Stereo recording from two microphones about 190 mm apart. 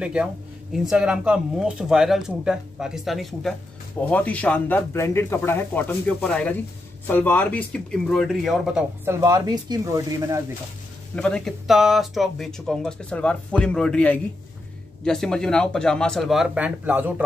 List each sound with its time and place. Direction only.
0.0 s speech: 5° right (ahead or behind)
9.0 s speech: 15° right (ahead or behind)
11.1 s speech: 5° left (ahead or behind)